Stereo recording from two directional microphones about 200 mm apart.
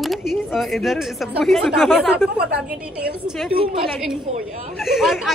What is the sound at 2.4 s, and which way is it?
Speech, 55° right (ahead or behind).